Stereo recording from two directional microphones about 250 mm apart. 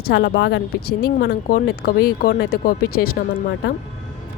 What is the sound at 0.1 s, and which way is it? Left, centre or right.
Speech, left.